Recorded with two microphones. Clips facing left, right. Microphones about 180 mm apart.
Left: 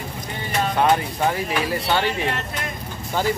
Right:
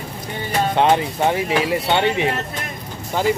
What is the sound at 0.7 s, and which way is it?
Speech, 25° right (ahead or behind).